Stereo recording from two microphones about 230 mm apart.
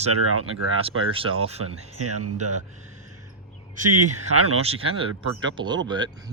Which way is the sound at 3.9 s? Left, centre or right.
Right.